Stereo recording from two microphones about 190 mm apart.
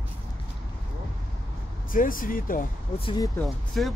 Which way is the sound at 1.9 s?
45° left (ahead or behind).